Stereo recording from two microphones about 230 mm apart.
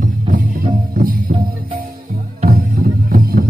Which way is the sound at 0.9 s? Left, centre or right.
Right.